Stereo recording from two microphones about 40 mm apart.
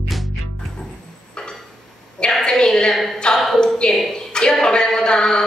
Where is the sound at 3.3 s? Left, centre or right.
Centre.